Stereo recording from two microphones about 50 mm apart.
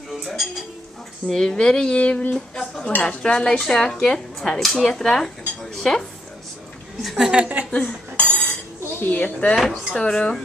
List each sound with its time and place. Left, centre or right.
0.1 s dishes: centre
1.2 s speech: centre; by 2.2 s left
2.3 s speech: centre
7.0 s a woman's voice: centre
7.2 s a woman's voice: right
7.7 s cutlery: left
9.0 s speech: left
9.6 s a woman's voice: centre
9.9 s speech: centre